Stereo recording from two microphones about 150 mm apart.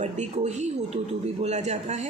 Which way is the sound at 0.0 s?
50° right (ahead or behind).